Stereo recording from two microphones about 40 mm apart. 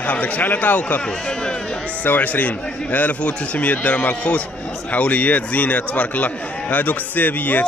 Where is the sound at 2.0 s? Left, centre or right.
Left.